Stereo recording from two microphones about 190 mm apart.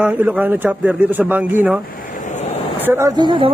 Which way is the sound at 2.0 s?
40° left (ahead or behind).